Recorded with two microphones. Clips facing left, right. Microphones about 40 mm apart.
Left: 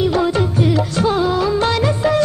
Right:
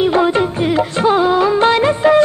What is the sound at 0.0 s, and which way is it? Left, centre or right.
Music of bollywood, right.